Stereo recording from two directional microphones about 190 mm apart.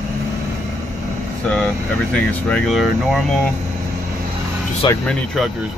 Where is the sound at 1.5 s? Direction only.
5° left (ahead or behind).